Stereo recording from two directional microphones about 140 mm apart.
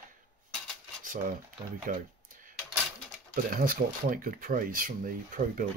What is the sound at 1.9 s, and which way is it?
Speech, 75° right (ahead or behind).